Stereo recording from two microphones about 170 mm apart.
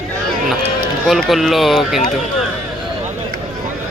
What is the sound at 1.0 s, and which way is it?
Speech, centre (ahead or behind).